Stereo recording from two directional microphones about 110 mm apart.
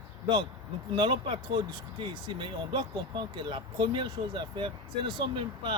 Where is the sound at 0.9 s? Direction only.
50° right (ahead or behind).